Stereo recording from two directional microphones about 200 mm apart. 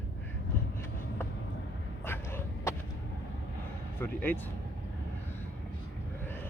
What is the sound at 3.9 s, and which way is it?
Speech, 10° left (ahead or behind).